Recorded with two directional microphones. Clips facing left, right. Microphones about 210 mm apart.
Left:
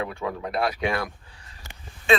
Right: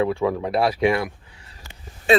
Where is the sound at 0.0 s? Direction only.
25° right (ahead or behind).